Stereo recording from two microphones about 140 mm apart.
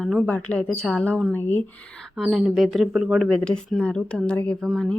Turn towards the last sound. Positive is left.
turn(degrees=10)  # may be behind; listen again after turning